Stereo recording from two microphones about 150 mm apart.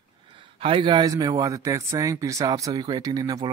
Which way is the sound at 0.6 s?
35° right (ahead or behind).